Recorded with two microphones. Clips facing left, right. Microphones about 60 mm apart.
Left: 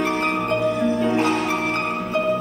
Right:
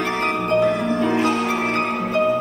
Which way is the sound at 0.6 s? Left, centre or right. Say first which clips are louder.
Right 2 dB; right.